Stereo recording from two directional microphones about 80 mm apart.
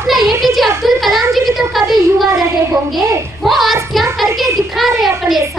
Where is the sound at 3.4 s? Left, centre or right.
Centre.